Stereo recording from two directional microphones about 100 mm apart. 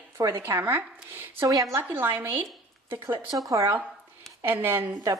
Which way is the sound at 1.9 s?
20° right (ahead or behind).